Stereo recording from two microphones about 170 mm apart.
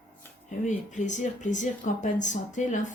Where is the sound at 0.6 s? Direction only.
45° left (ahead or behind).